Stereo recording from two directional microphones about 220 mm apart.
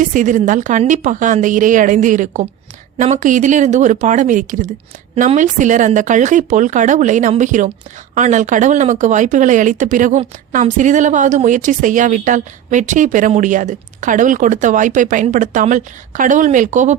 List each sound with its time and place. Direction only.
0.0 s speech: 35° right (ahead or behind)